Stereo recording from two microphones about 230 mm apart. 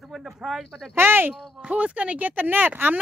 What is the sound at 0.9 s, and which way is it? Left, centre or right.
Speech, centre.